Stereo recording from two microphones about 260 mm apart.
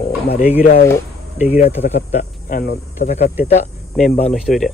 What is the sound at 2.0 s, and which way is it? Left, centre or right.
Speech, left.